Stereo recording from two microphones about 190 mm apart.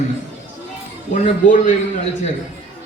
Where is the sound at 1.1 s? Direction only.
40° left (ahead or behind).